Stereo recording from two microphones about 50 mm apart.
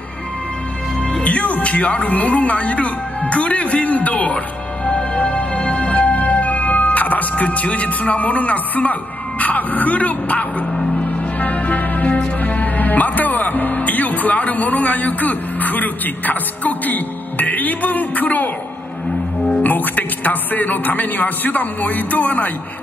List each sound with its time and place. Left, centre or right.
1.1 s speech: left
4.8 s music: left
9.4 s speech: left
11.0 s music: left
12.4 s speech: left
19.5 s speech: left